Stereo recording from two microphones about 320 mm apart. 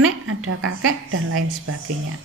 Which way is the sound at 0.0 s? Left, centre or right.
Right.